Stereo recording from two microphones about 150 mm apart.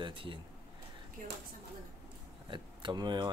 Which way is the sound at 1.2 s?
65° right (ahead or behind).